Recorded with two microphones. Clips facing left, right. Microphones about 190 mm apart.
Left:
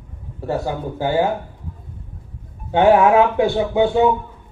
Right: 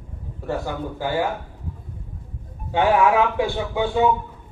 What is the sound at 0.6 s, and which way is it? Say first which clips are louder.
Speech: left 4 dB; 20° left (ahead or behind).